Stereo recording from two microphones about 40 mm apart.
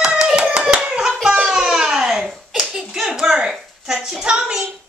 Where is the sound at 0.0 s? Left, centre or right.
Right.